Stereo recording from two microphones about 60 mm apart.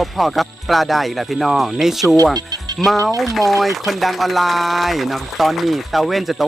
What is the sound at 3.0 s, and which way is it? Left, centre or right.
Speech, right.